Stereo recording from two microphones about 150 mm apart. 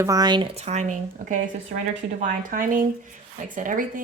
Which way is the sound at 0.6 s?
50° right (ahead or behind).